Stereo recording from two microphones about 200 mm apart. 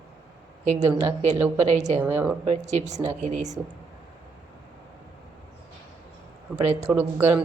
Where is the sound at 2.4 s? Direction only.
35° right (ahead or behind).